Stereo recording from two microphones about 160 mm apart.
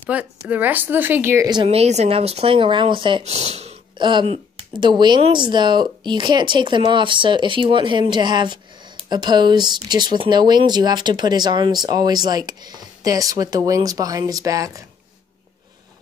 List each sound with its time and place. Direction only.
0.1 s speech: 10° right (ahead or behind)
1.7 s speech: 40° right (ahead or behind)
4.0 s speech: 30° right (ahead or behind)